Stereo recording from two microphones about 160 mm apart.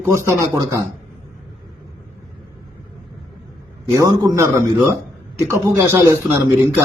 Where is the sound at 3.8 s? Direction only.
20° right (ahead or behind).